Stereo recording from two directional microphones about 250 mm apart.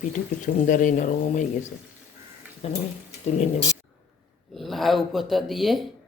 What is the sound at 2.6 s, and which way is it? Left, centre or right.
Speech, left.